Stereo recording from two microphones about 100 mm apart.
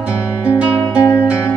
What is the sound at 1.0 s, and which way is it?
Music, 25° left (ahead or behind).